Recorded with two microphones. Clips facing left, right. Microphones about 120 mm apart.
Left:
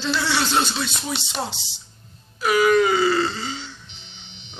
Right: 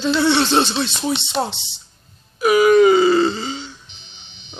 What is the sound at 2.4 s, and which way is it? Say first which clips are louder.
Groan: right 6 dB; 15° right (ahead or behind).